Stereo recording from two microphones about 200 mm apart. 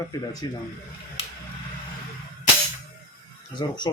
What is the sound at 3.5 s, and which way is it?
Speech, 20° left (ahead or behind).